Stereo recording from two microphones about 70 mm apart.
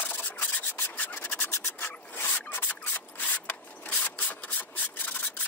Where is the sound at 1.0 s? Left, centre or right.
Left.